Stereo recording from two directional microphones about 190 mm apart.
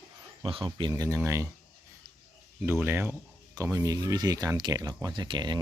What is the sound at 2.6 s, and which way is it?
Speech, 10° right (ahead or behind).